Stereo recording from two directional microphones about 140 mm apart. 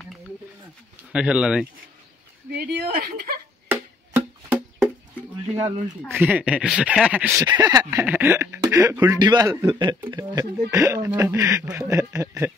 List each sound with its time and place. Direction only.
1.1 s speech: 5° right (ahead or behind)
2.5 s a woman's voice: 90° right
3.7 s music: 15° right (ahead or behind)
6.0 s speech: 15° right (ahead or behind)
7.4 s speech: 30° right (ahead or behind)
8.0 s speech: 15° right (ahead or behind)